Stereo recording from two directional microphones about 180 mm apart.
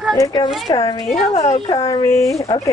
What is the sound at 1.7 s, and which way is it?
Speech, 20° left (ahead or behind).